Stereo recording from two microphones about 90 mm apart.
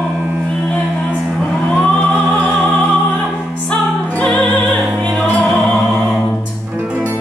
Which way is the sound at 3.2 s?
5° left (ahead or behind).